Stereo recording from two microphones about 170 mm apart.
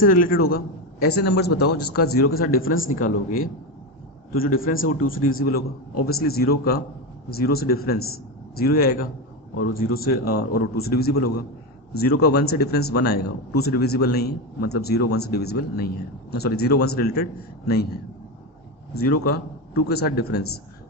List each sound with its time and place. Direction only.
0.0 s a man's voice: 55° left (ahead or behind)
19.0 s a man's voice: 70° left (ahead or behind)